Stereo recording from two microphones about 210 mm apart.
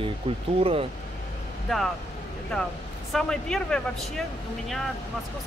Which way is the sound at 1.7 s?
Centre (ahead or behind).